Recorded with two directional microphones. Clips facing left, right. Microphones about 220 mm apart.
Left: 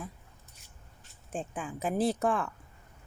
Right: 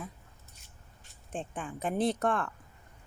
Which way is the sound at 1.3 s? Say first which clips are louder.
Left 1 dB; centre (ahead or behind).